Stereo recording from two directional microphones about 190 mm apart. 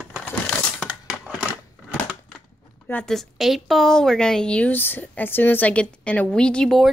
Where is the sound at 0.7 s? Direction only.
5° right (ahead or behind).